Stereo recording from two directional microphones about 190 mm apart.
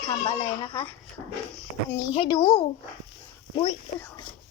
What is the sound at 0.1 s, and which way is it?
Speech, 25° left (ahead or behind).